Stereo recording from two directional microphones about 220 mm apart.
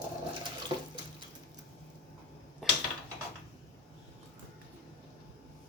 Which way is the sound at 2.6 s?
Centre (ahead or behind).